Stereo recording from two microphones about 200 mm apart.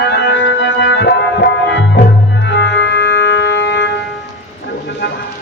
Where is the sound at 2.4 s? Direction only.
60° left (ahead or behind).